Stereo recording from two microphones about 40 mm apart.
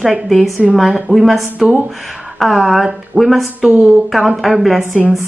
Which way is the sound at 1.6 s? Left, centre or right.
Centre.